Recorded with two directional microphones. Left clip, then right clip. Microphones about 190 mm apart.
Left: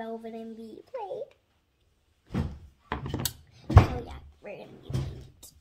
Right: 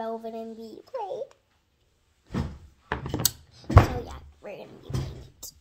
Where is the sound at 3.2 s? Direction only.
Centre (ahead or behind).